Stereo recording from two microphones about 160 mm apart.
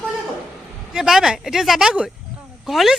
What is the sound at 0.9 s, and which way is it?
Speech, 5° right (ahead or behind).